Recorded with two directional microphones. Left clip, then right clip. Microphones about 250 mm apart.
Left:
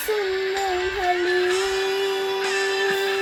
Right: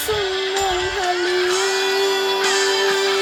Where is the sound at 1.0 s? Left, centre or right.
Right.